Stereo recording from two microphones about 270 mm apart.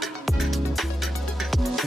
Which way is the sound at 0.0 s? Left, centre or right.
Centre.